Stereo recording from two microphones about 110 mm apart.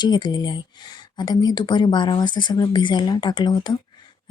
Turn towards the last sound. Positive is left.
turn(degrees=40)  # may be behind; listen again after turning